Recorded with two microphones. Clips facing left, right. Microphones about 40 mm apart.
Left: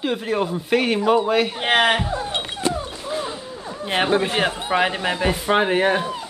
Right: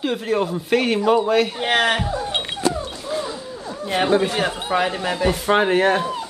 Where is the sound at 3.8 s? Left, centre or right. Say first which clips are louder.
Even; left.